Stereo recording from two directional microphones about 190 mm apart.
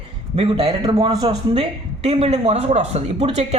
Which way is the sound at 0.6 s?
20° right (ahead or behind).